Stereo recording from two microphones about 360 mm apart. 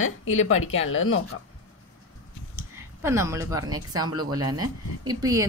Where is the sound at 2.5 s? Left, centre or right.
Centre.